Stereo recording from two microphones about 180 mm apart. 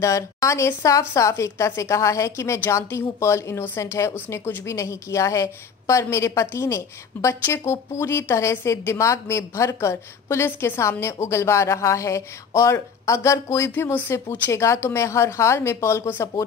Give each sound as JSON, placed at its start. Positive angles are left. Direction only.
{"t": 0.0, "sound": "a woman's voice", "side_deg": 15}